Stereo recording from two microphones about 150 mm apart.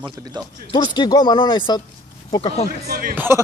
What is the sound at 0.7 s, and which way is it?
Speech, 30° left (ahead or behind).